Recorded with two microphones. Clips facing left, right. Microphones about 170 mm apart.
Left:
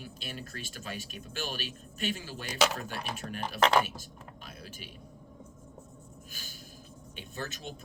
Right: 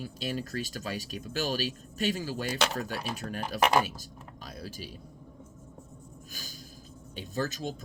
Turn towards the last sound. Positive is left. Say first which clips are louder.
# right 7 dB
turn(degrees=-40)  # may be behind; listen again after turning